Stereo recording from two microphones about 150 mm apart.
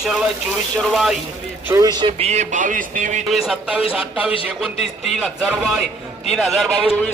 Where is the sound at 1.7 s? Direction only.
20° right (ahead or behind).